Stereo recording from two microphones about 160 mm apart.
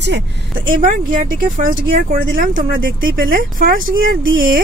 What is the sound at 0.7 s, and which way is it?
Speech, 60° right (ahead or behind).